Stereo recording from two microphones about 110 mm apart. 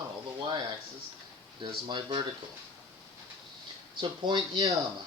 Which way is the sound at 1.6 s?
45° right (ahead or behind).